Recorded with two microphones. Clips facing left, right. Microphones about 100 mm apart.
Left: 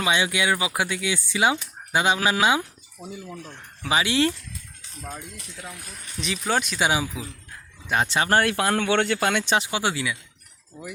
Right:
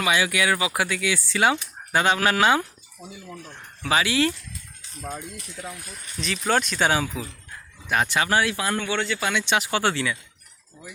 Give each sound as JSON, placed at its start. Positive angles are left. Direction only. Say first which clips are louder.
{"t": 0.0, "sound": "speech", "louder": "right 1 dB", "side_deg": 25}
{"t": 3.0, "sound": "speech", "louder": "left 3 dB", "side_deg": 0}
{"t": 3.8, "sound": "speech", "louder": "even", "side_deg": 20}
{"t": 6.1, "sound": "speech", "louder": "right 2 dB", "side_deg": 15}
{"t": 7.9, "sound": "speech", "louder": "even", "side_deg": 25}
{"t": 8.3, "sound": "speech", "louder": "left 2 dB", "side_deg": 50}
{"t": 9.7, "sound": "speech", "louder": "right 2 dB", "side_deg": 10}